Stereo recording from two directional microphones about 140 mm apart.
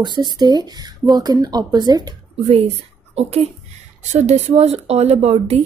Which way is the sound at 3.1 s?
45° right (ahead or behind).